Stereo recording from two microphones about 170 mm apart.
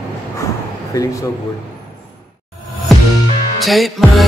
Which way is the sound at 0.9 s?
20° left (ahead or behind).